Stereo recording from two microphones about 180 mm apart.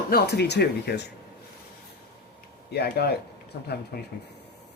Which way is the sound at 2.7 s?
65° left (ahead or behind).